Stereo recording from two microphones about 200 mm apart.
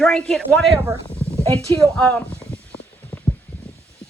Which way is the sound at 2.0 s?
5° left (ahead or behind).